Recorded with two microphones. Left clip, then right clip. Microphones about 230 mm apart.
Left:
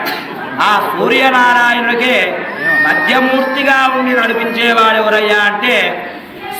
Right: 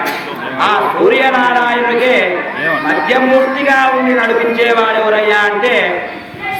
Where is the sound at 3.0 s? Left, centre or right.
Left.